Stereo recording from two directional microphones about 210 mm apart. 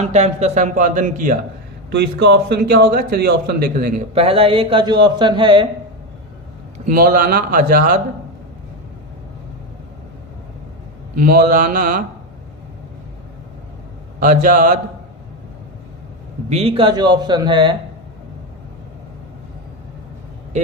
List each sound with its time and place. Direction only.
0.0 s a man's voice: 35° right (ahead or behind)
1.9 s a man's voice: 55° right (ahead or behind)
4.1 s a man's voice: 25° right (ahead or behind)
6.7 s a man's voice: 40° right (ahead or behind)
11.2 s a man's voice: 45° right (ahead or behind)
14.2 s a man's voice: 40° right (ahead or behind)
16.5 s a man's voice: 30° right (ahead or behind)